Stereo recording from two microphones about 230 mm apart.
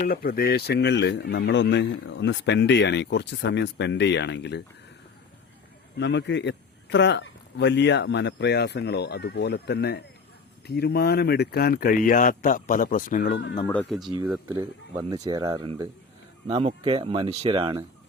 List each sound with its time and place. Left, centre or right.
0.1 s speech: left
6.0 s speech: left
13.7 s speech: centre; by 17.8 s right